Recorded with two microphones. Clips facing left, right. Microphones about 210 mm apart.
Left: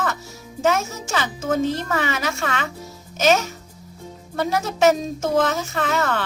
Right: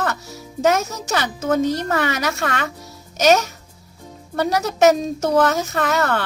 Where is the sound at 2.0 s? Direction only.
60° right (ahead or behind).